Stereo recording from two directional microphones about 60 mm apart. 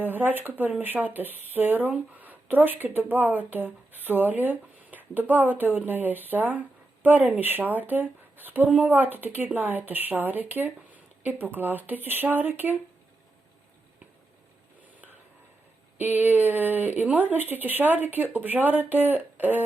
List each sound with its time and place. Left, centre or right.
0.0 s speech: right
16.0 s speech: right